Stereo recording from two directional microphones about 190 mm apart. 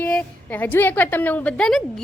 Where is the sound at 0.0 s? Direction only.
10° left (ahead or behind).